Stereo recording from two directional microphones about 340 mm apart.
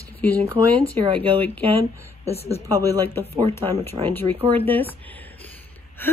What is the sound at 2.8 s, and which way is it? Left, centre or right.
A woman's voice, centre.